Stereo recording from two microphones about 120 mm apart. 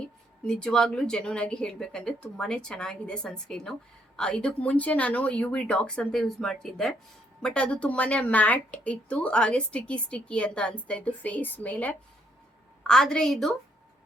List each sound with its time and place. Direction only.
0.4 s a woman's voice: 5° left (ahead or behind)